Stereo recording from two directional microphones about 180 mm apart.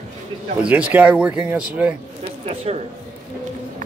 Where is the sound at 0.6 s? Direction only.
5° right (ahead or behind).